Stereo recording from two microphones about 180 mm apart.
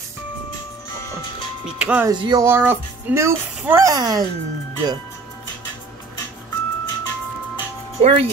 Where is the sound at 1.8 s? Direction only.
5° right (ahead or behind).